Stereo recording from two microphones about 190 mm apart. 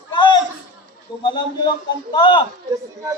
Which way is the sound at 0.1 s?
25° left (ahead or behind).